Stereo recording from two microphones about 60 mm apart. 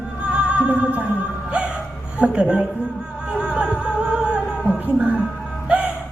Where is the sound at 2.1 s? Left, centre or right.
Centre.